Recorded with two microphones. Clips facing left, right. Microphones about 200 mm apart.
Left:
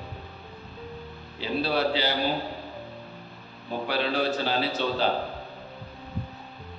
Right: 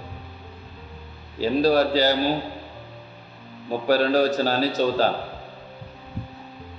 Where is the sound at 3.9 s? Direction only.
45° right (ahead or behind).